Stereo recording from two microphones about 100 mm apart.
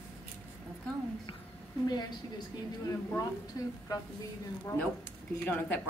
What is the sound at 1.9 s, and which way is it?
Speech, 45° left (ahead or behind).